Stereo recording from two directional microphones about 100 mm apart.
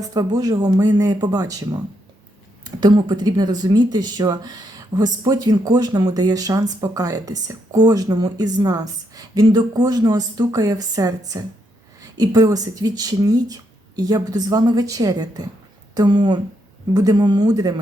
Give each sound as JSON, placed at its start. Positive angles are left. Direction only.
{"t": 0.0, "sound": "speech", "side_deg": -40}